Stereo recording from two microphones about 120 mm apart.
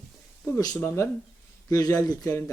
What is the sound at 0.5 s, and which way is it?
Speech, 30° left (ahead or behind).